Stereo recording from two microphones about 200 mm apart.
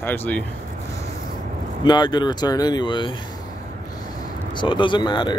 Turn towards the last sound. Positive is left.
turn(degrees=20)  # may be behind; listen again after turning